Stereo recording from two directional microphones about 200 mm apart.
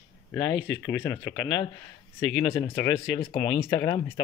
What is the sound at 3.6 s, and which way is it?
Speech, 15° left (ahead or behind).